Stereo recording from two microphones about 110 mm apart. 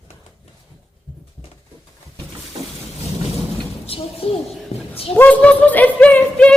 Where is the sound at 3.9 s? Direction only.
60° left (ahead or behind).